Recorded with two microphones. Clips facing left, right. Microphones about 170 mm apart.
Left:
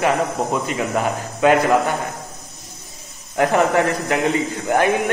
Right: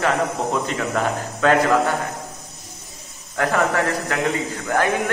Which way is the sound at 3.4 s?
20° left (ahead or behind).